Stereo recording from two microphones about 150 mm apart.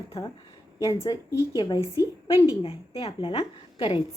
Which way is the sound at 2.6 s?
35° left (ahead or behind).